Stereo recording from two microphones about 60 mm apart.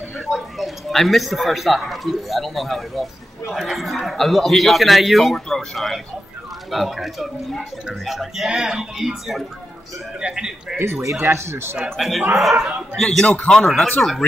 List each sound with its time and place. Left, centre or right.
0.1 s speech: centre
10.8 s speech: right
12.0 s a man's voice: centre